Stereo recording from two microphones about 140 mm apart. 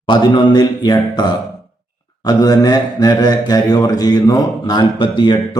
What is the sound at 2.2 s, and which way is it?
Speech, 30° left (ahead or behind).